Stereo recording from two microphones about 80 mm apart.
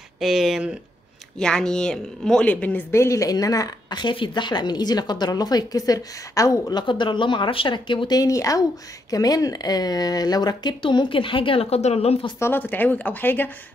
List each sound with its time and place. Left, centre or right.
0.2 s speech: centre
1.4 s speech: centre
2.4 s speech: centre
2.9 s a woman's voice: left
4.0 s a woman's voice: left
6.7 s speech: left
8.2 s a woman's voice: left
12.4 s speech: left